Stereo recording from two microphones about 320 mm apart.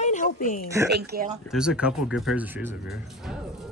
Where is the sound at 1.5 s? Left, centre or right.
Centre.